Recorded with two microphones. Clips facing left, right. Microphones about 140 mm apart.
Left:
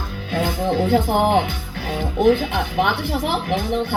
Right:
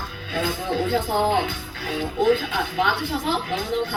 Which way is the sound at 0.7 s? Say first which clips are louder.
Left 5 dB; 30° left (ahead or behind).